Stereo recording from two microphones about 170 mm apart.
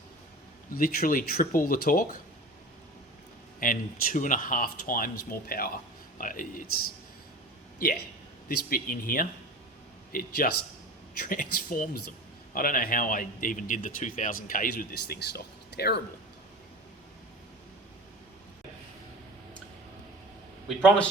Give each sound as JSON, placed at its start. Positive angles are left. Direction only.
{"t": 0.7, "sound": "a man's voice", "side_deg": 60}
{"t": 3.6, "sound": "a man's voice", "side_deg": 55}
{"t": 7.8, "sound": "a man's voice", "side_deg": 60}